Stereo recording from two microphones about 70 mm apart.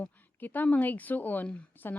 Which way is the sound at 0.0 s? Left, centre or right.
Left.